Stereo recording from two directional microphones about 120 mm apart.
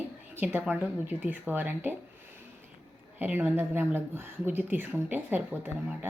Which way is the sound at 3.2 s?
15° right (ahead or behind).